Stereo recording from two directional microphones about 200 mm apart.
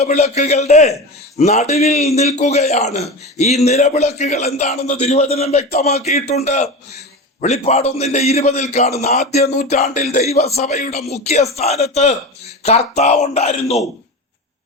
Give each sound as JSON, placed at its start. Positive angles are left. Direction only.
{"t": 0.0, "sound": "a man's voice", "side_deg": 35}